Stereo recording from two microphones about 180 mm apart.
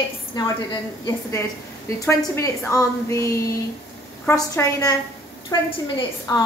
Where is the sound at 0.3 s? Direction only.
25° left (ahead or behind).